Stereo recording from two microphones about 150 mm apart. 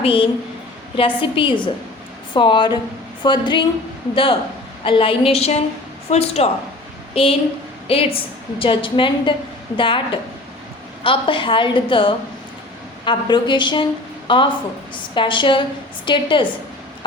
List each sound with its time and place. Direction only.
0.0 s a woman's voice: 35° left (ahead or behind)